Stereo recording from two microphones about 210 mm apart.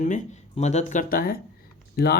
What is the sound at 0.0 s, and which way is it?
Speech, 35° left (ahead or behind).